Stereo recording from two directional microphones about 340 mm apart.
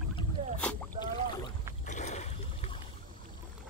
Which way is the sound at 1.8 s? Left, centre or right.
Left.